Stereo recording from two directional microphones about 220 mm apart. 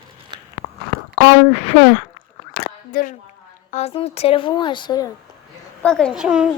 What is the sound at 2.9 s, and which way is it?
A woman's voice, 35° left (ahead or behind).